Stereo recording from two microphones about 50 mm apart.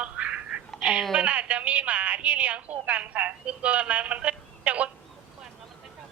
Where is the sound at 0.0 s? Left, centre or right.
Right.